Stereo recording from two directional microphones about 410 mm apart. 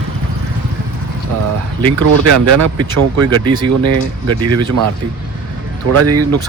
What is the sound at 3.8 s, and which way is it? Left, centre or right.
Speech, right.